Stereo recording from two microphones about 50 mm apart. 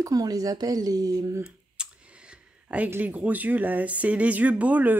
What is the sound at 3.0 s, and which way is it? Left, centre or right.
Speech, right.